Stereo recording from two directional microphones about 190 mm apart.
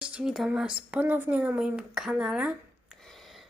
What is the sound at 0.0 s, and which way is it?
A woman's voice, 5° right (ahead or behind).